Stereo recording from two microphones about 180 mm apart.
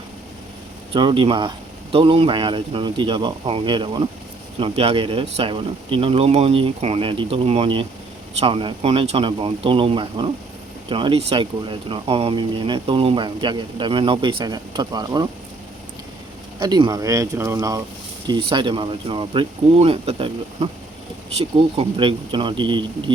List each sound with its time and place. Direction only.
0.9 s speech: 30° right (ahead or behind)
16.6 s speech: 25° right (ahead or behind)